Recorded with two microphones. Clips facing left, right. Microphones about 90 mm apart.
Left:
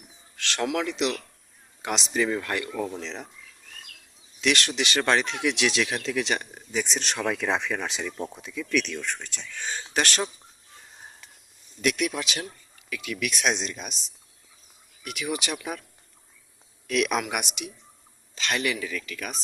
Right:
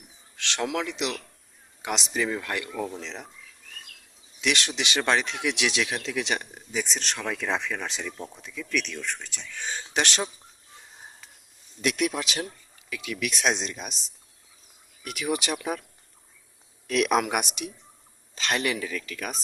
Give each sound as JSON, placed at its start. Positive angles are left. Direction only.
{"t": 0.3, "sound": "speech", "side_deg": -20}
{"t": 4.4, "sound": "speech", "side_deg": -15}
{"t": 6.8, "sound": "speech", "side_deg": 5}
{"t": 11.8, "sound": "speech", "side_deg": -25}
{"t": 15.0, "sound": "speech", "side_deg": -35}
{"t": 16.8, "sound": "speech", "side_deg": -35}